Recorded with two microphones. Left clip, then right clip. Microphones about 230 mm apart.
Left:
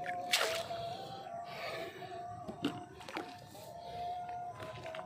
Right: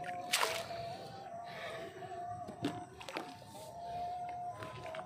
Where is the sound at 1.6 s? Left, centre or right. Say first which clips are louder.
Left 4 dB; left.